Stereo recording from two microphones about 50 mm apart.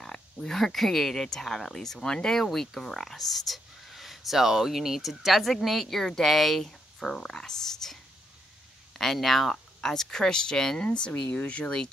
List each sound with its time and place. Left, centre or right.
0.0 s speech: centre